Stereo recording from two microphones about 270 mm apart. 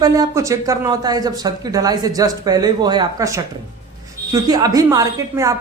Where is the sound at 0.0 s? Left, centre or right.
Centre.